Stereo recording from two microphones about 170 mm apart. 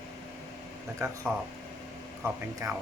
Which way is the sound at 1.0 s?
15° right (ahead or behind).